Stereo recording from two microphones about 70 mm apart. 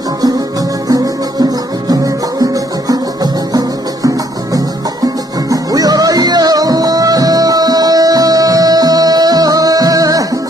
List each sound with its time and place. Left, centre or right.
0.8 s music: right